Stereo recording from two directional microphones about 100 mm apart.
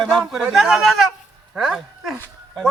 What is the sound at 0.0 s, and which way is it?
A man's voice, 5° left (ahead or behind).